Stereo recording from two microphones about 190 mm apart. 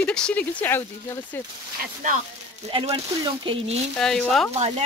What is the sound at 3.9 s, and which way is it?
Speech, 5° left (ahead or behind).